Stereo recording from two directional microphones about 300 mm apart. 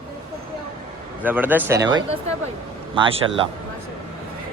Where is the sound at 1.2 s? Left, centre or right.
Centre.